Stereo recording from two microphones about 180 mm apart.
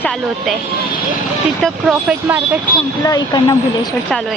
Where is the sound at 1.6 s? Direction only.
5° right (ahead or behind).